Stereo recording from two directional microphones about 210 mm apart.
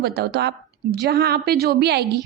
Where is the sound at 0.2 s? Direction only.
50° right (ahead or behind).